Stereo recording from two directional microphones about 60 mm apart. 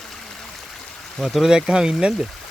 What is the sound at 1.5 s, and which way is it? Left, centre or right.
Speech, centre.